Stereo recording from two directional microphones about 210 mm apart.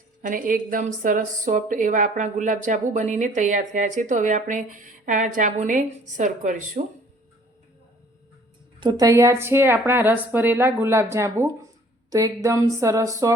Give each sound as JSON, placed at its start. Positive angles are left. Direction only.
{"t": 0.2, "sound": "a woman's voice", "side_deg": -40}
{"t": 8.8, "sound": "a woman's voice", "side_deg": -20}